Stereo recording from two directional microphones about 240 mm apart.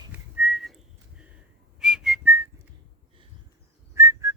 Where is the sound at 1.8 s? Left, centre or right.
Centre.